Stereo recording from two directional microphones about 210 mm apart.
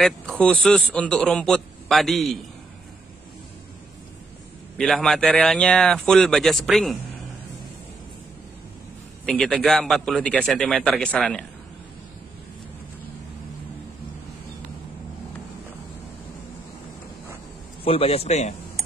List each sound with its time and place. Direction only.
0.0 s a man's voice: 5° left (ahead or behind)
4.7 s a man's voice: centre (ahead or behind)
9.2 s a man's voice: 5° left (ahead or behind)
17.8 s speech: 30° left (ahead or behind)